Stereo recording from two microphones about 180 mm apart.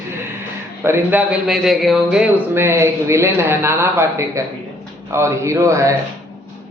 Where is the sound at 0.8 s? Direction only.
10° right (ahead or behind).